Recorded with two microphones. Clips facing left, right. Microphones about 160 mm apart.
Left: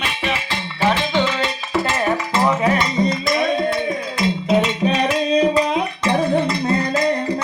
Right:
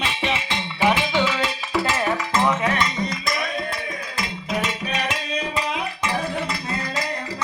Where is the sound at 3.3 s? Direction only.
25° left (ahead or behind).